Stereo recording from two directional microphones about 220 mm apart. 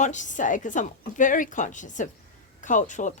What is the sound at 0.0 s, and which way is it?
A woman's voice, 35° left (ahead or behind).